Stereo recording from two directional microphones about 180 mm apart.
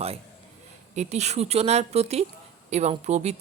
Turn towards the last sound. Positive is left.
turn(degrees=-40)  # may be behind; listen again after turning